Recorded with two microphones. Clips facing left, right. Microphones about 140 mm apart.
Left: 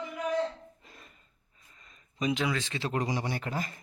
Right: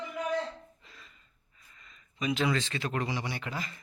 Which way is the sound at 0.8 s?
50° left (ahead or behind).